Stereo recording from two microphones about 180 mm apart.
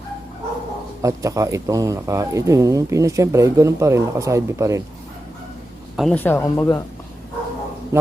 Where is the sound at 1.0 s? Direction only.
20° right (ahead or behind).